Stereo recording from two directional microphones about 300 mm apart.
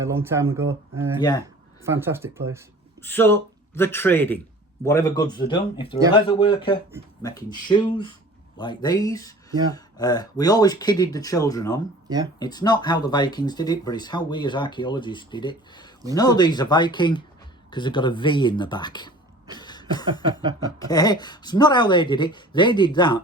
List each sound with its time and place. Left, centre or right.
0.0 s speech: centre
3.0 s speech: centre
12.0 s speech: centre
12.4 s speech: centre
19.5 s cough: centre
20.7 s speech: centre